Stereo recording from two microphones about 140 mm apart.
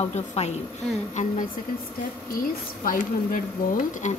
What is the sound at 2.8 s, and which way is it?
Speech, 75° left (ahead or behind).